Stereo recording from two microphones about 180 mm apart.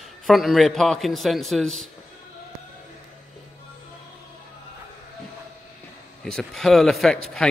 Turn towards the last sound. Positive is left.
turn(degrees=0)  # may be behind; listen again after turning